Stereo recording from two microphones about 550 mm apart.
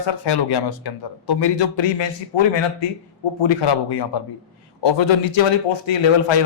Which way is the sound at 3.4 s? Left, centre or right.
Left.